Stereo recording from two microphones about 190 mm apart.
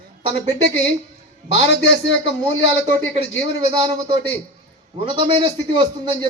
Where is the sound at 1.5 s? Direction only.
70° left (ahead or behind).